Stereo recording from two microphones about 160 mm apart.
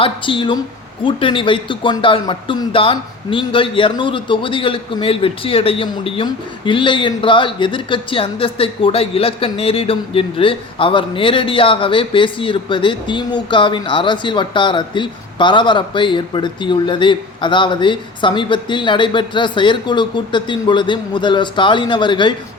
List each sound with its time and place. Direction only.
0.0 s speech: 30° left (ahead or behind)